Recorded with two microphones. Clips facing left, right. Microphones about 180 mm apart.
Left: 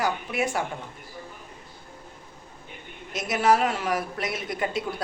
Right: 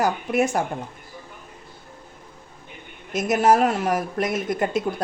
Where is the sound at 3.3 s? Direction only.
45° right (ahead or behind).